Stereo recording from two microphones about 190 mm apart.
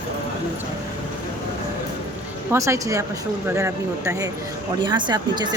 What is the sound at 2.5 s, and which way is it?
Speech, 15° right (ahead or behind).